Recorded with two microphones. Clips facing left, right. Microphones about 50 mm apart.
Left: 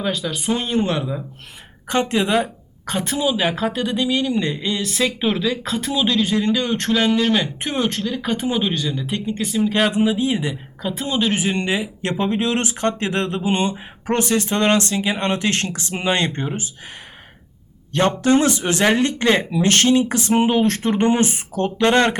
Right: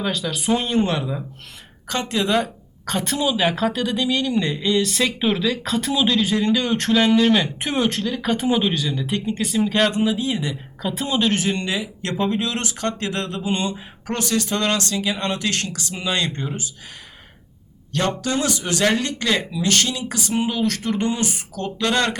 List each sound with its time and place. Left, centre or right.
0.0 s a woman's voice: centre
1.9 s a woman's voice: left
10.8 s a woman's voice: centre
11.3 s speech: centre
18.2 s speech: left
19.5 s speech: left